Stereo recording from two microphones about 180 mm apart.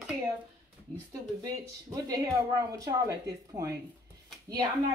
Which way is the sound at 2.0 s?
20° right (ahead or behind).